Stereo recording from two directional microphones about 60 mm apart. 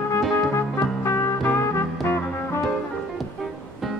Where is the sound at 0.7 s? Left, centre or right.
Left.